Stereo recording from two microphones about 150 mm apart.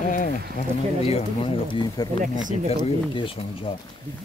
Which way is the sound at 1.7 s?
35° left (ahead or behind).